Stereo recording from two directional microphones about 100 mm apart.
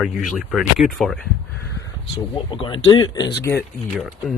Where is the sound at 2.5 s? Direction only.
60° left (ahead or behind).